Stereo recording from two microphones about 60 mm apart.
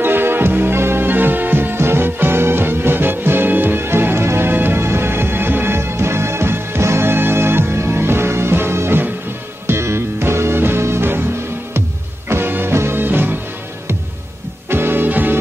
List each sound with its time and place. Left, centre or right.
0.0 s music: right
12.3 s music: right
14.7 s music: right